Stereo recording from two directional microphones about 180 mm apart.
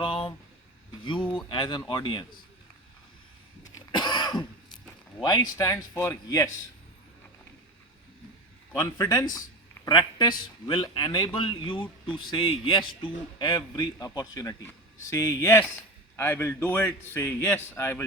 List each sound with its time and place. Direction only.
0.0 s a sound: 30° left (ahead or behind)
1.0 s a man's voice: 25° left (ahead or behind)
3.8 s cough: 25° left (ahead or behind)
5.2 s a man's voice: 20° left (ahead or behind)
8.8 s a man's voice: 20° left (ahead or behind)